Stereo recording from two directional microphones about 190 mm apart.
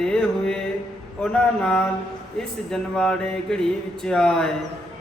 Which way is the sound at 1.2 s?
5° left (ahead or behind).